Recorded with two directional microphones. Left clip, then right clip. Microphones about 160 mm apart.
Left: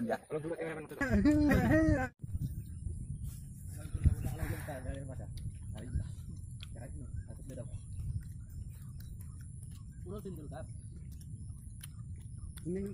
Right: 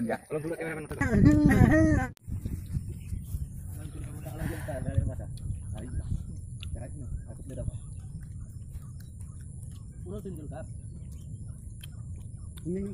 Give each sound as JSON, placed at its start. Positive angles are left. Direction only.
{"t": 0.0, "sound": "a man's voice", "side_deg": 0}
{"t": 0.9, "sound": "speech", "side_deg": 40}
{"t": 4.4, "sound": "a sound", "side_deg": -20}
{"t": 4.7, "sound": "a sound", "side_deg": 65}
{"t": 10.0, "sound": "speech", "side_deg": 45}
{"t": 12.6, "sound": "speech", "side_deg": 45}